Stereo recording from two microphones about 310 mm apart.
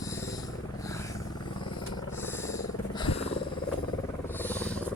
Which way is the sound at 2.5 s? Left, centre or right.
Centre.